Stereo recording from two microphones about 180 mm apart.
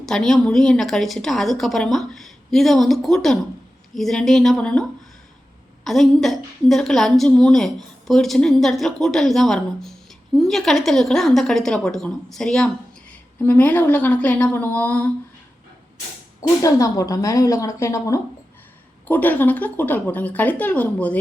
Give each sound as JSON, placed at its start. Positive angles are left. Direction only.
{"t": 0.0, "sound": "a woman's voice", "side_deg": 0}
{"t": 16.6, "sound": "a woman's voice", "side_deg": 20}